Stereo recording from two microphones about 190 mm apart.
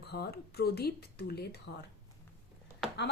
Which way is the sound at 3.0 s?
65° left (ahead or behind).